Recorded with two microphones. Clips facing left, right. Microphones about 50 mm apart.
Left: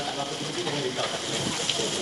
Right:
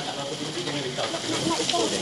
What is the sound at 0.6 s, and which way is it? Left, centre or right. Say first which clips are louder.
Speech: left 1 dB; left.